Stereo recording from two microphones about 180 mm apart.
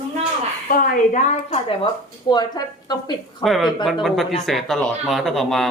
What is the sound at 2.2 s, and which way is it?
A woman's voice, 25° left (ahead or behind).